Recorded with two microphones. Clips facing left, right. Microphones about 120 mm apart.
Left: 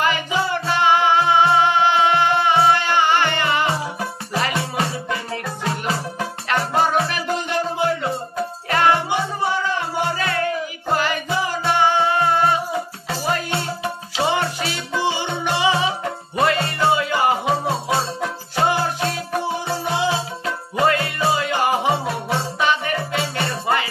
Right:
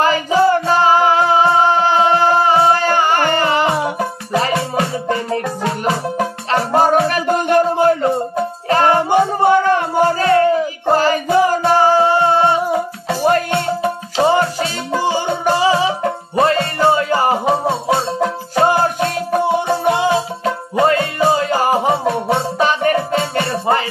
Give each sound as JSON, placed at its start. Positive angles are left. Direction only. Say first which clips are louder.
{"t": 0.0, "sound": "music", "louder": "right 8 dB", "side_deg": -35}
{"t": 13.2, "sound": "music", "louder": "right 8 dB", "side_deg": -45}
{"t": 18.5, "sound": "music", "louder": "right 5 dB", "side_deg": -45}
{"t": 20.4, "sound": "music", "louder": "right 4 dB", "side_deg": -30}